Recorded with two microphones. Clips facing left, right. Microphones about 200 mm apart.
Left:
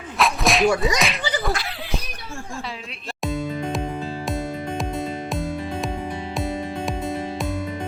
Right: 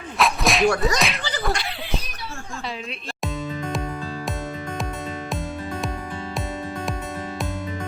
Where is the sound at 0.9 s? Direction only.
Centre (ahead or behind).